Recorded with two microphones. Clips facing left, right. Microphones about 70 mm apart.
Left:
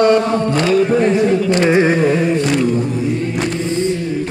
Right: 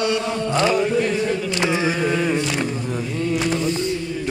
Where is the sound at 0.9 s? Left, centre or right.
Left.